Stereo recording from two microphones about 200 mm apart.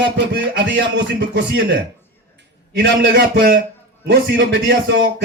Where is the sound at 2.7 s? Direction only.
60° right (ahead or behind).